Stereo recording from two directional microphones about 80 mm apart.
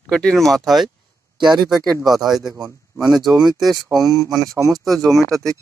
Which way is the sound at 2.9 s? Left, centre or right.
Right.